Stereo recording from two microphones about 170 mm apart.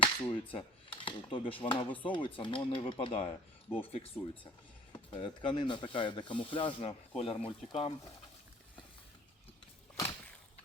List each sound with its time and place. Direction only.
0.0 s cutlery: 30° left (ahead or behind)
4.9 s speech: 30° left (ahead or behind)
7.2 s cutlery: 35° left (ahead or behind)